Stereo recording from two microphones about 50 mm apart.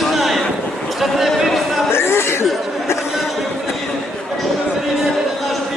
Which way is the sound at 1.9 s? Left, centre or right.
Left.